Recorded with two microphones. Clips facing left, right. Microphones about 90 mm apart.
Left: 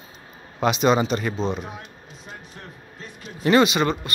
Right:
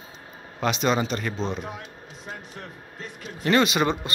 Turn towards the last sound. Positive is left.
turn(degrees=10)  # may be behind; listen again after turning